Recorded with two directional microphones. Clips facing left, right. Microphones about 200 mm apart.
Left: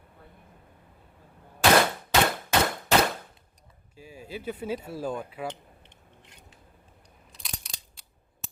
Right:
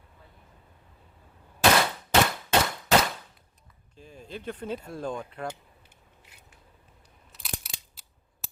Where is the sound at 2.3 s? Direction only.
50° left (ahead or behind).